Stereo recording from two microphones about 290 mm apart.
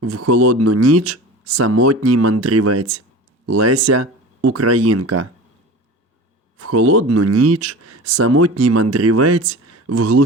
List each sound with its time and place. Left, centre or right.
0.0 s speech: right
6.6 s speech: right